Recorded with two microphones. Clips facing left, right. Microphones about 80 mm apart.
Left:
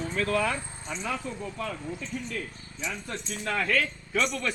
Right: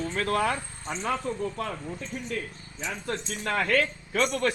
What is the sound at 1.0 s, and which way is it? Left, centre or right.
Speech, right.